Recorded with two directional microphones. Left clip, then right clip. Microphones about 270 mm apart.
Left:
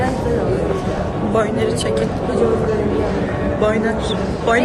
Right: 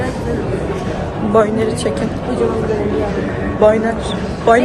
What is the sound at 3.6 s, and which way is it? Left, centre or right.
Speech, centre.